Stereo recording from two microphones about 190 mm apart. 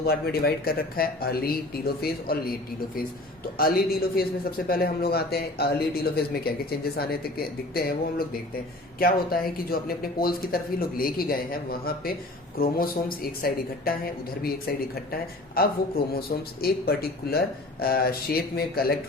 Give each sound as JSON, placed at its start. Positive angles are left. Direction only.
{"t": 0.0, "sound": "a man's voice", "side_deg": 55}
{"t": 3.6, "sound": "a man's voice", "side_deg": 50}